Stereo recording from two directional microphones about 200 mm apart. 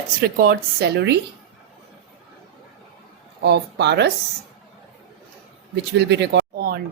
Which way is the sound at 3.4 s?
60° right (ahead or behind).